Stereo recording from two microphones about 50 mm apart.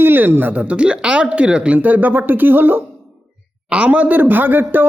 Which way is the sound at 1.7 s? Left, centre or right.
Right.